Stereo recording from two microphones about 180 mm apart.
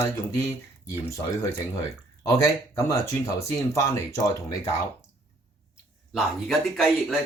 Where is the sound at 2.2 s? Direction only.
15° left (ahead or behind).